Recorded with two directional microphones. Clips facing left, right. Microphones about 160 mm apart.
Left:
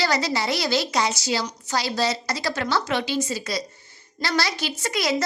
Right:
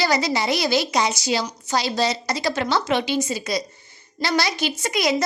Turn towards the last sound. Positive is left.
turn(degrees=-15)  # may be behind; listen again after turning